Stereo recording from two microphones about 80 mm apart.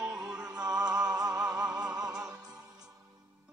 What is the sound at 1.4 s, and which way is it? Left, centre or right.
Music, centre.